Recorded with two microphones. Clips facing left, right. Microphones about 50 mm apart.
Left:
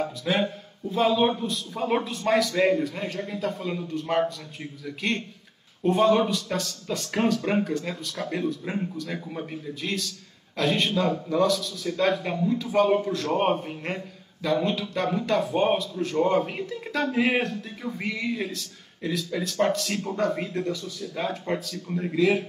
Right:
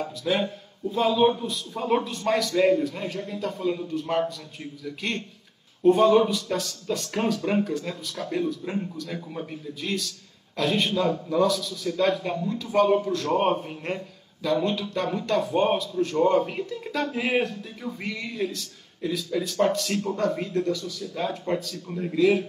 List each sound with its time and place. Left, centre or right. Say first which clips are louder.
0.0 s a man's voice: even; centre